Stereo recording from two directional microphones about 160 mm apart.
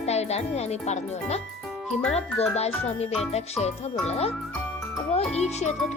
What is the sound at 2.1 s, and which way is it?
A child's voice, 40° left (ahead or behind).